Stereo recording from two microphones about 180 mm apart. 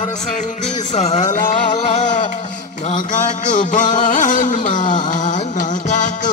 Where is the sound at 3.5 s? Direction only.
45° left (ahead or behind).